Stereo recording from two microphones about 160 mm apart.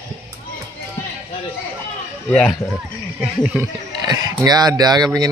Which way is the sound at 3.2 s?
10° right (ahead or behind).